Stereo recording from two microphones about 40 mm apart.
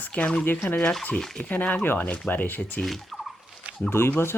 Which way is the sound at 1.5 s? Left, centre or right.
Left.